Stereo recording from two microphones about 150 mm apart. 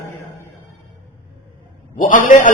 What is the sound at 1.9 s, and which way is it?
Speech, 60° left (ahead or behind).